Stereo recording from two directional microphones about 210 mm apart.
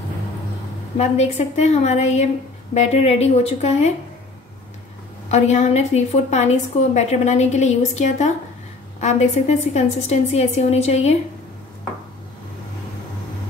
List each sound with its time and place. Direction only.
0.9 s a woman's voice: 30° left (ahead or behind)
5.3 s a woman's voice: 30° left (ahead or behind)